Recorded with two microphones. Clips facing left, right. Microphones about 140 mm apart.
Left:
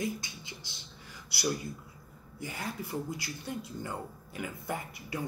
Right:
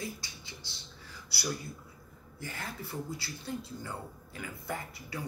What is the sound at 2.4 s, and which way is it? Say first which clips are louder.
Speech: left 3 dB; 15° left (ahead or behind).